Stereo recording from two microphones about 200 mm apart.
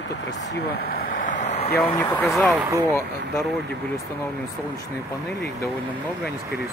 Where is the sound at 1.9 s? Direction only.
10° left (ahead or behind).